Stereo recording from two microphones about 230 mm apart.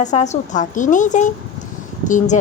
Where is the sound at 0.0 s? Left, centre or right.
Left.